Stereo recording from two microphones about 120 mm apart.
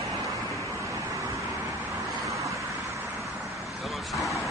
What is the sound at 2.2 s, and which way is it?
Vehicle, 25° right (ahead or behind).